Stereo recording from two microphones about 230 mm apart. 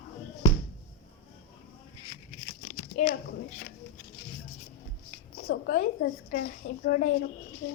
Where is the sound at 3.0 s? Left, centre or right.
Left.